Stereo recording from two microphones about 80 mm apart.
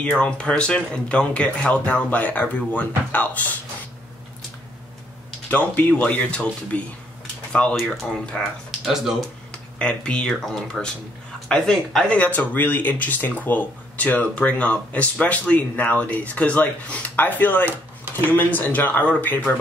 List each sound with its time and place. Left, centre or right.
0.0 s speech: centre
5.5 s speech: centre
8.3 s speech: centre
9.5 s speech: centre
12.1 s speech: centre